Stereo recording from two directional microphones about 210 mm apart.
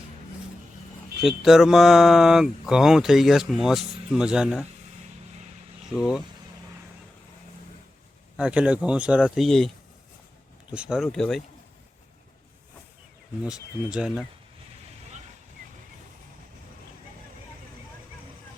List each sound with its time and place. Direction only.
1.2 s speech: centre (ahead or behind)
6.0 s speech: centre (ahead or behind)
8.4 s speech: 5° right (ahead or behind)
13.4 s speech: 5° right (ahead or behind)
15.6 s vehicle: 40° right (ahead or behind)